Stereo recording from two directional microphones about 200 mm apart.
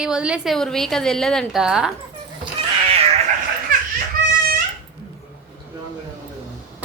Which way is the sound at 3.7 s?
45° right (ahead or behind).